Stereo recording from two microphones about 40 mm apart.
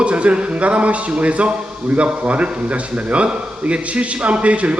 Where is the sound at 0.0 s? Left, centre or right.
Right.